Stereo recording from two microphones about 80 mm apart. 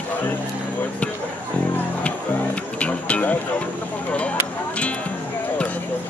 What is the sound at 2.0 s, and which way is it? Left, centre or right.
Music, centre.